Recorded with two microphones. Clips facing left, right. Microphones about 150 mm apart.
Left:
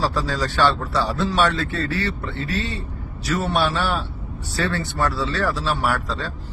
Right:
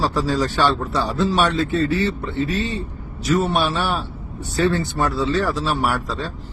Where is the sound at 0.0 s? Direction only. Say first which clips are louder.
Right 3 dB; 20° right (ahead or behind).